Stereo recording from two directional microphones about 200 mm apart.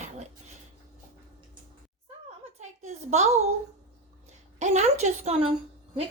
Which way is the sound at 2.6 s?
35° right (ahead or behind).